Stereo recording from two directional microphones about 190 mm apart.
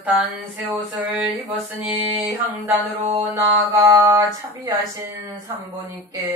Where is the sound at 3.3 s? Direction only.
15° right (ahead or behind).